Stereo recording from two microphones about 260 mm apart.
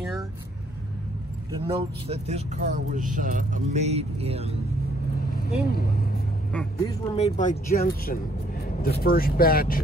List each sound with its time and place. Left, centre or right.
1.5 s speech: centre
5.3 s speech: left
6.5 s speech: centre
7.2 s speech: left